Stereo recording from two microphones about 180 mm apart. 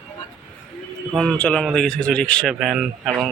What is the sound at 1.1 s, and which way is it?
Speech, centre (ahead or behind).